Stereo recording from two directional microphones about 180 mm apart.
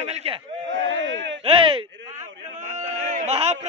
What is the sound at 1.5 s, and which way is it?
Speech, 30° right (ahead or behind).